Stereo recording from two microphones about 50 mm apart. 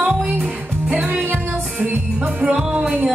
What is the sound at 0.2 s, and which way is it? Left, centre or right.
Music, centre.